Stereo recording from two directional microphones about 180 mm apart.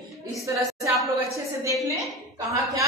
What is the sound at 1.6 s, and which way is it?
Speech, 15° right (ahead or behind).